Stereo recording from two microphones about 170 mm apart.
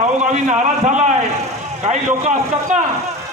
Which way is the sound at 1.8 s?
40° right (ahead or behind).